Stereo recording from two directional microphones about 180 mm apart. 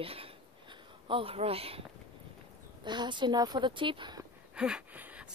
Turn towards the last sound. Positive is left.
turn(degrees=-5)  # may be behind; listen again after turning